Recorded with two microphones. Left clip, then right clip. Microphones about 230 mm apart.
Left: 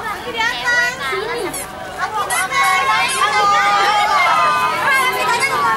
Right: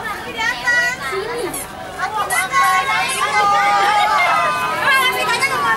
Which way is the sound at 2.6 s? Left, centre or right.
Centre.